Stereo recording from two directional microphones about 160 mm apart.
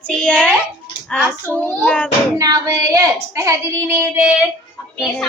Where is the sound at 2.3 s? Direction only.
20° right (ahead or behind).